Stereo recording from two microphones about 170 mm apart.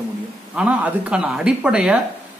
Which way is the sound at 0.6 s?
5° right (ahead or behind).